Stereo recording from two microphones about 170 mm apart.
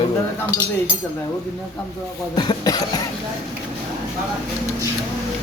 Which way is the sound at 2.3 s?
25° left (ahead or behind).